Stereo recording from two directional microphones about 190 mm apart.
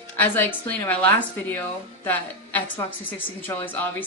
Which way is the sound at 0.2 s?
10° left (ahead or behind).